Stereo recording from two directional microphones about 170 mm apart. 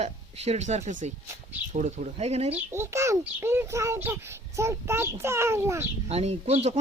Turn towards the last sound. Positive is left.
turn(degrees=-40)  # may be behind; listen again after turning